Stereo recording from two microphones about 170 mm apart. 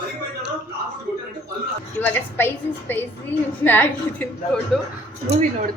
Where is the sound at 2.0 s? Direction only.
10° left (ahead or behind).